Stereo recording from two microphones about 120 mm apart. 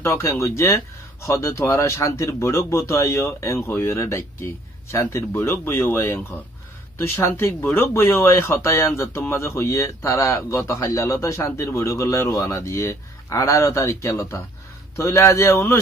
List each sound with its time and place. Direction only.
0.0 s speech: 25° left (ahead or behind)